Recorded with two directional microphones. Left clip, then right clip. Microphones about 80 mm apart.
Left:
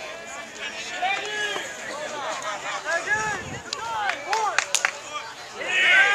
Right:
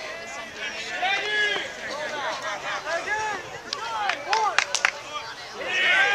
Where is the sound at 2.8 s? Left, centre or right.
Centre.